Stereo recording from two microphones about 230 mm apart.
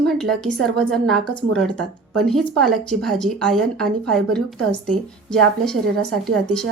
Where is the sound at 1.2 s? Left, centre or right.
Right.